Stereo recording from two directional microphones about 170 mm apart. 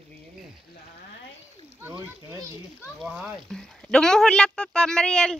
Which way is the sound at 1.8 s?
15° right (ahead or behind).